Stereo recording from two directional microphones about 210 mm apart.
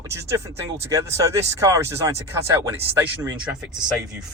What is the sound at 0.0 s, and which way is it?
Speech, 15° right (ahead or behind).